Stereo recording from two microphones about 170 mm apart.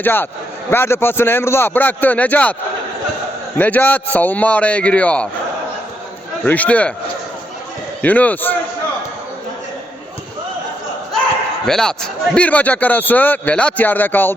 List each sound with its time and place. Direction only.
0.0 s a man's voice: 10° left (ahead or behind)
6.4 s a man's voice: 10° left (ahead or behind)
8.0 s a man's voice: 10° left (ahead or behind)
11.6 s a man's voice: 5° left (ahead or behind)